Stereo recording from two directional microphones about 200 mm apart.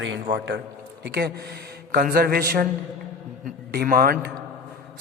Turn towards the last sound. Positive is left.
turn(degrees=-45)  # may be behind; listen again after turning